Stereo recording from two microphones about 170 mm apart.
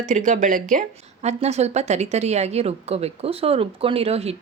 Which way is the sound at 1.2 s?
40° right (ahead or behind).